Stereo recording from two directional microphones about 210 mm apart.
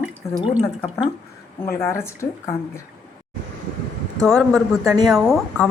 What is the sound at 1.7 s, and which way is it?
Speech, 10° left (ahead or behind).